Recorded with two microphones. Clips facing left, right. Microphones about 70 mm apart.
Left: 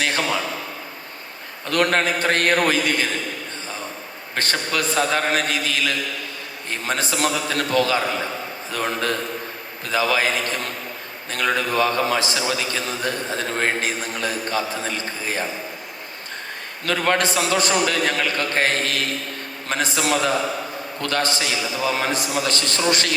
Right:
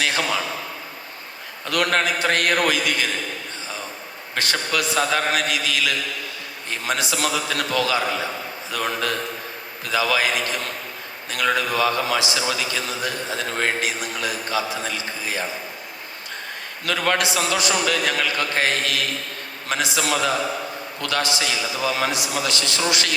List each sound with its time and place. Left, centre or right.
1.6 s a man's voice: left
4.4 s a man's voice: left
16.8 s a man's voice: left